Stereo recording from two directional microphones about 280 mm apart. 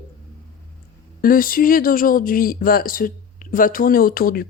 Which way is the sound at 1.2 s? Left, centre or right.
Left.